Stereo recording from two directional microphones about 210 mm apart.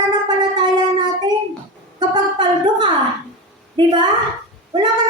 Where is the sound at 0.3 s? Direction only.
20° right (ahead or behind).